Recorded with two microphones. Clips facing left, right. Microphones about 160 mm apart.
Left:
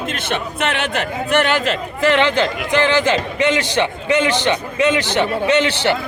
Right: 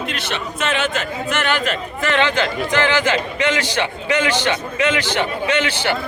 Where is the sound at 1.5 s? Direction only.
20° left (ahead or behind).